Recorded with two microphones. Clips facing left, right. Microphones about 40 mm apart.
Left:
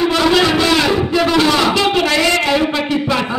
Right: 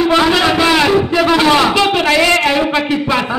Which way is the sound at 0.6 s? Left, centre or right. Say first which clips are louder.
Right 3 dB; centre.